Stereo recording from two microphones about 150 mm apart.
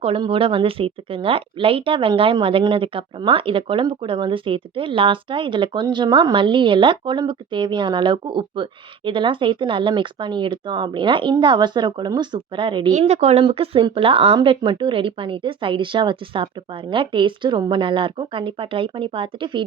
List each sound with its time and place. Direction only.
0.0 s speech: 40° right (ahead or behind)
12.9 s a woman's voice: 50° right (ahead or behind)